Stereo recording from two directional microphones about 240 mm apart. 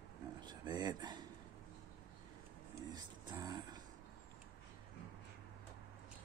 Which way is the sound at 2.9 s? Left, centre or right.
Centre.